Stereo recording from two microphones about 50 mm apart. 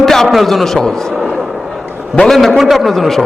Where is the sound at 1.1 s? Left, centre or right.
Centre.